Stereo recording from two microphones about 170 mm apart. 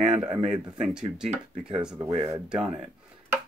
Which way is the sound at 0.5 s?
5° right (ahead or behind).